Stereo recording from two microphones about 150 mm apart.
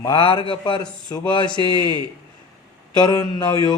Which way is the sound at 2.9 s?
25° left (ahead or behind).